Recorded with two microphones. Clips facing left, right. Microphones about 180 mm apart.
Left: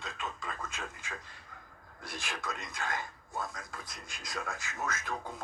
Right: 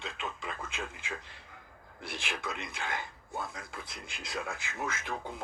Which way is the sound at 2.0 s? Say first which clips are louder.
Right 2 dB; 60° right (ahead or behind).